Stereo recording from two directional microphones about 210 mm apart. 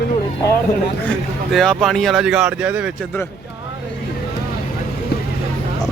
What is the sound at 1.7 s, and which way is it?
Speech, centre (ahead or behind).